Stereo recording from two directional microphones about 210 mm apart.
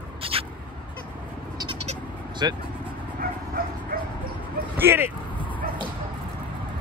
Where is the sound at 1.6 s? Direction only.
25° right (ahead or behind).